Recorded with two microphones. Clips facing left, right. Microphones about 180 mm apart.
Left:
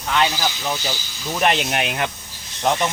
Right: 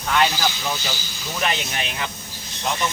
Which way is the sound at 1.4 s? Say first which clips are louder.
Left 6 dB; 60° left (ahead or behind).